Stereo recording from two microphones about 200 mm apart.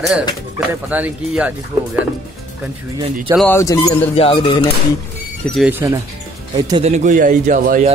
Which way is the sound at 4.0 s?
30° left (ahead or behind).